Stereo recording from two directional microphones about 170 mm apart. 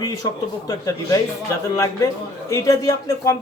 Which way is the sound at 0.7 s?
20° left (ahead or behind).